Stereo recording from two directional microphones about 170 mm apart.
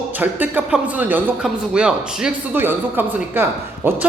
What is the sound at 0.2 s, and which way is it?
A man's voice, 10° right (ahead or behind).